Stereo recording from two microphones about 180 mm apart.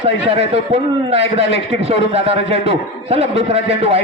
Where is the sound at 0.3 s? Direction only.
35° right (ahead or behind).